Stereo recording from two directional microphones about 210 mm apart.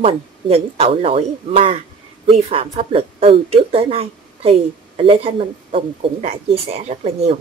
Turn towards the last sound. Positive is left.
turn(degrees=-30)  # may be behind; listen again after turning